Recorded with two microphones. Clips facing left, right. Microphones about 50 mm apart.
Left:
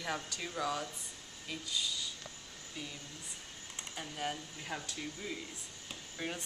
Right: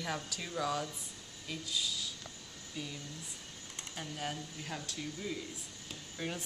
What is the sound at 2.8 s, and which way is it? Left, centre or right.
Speech, centre.